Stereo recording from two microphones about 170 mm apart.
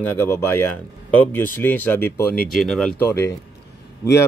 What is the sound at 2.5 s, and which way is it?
Speech, centre (ahead or behind).